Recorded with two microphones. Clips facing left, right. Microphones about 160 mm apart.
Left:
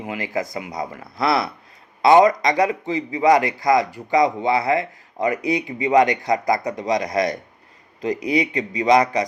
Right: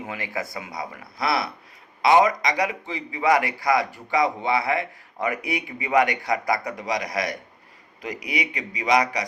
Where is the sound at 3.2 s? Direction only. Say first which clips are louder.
Left 4 dB; 20° left (ahead or behind).